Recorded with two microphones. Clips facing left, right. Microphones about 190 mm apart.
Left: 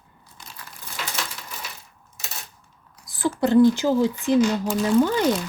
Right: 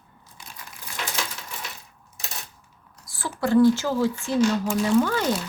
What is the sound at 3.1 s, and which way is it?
Speech, 20° left (ahead or behind).